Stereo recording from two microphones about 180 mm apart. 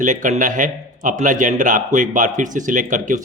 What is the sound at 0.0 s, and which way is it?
A man's voice, 45° right (ahead or behind).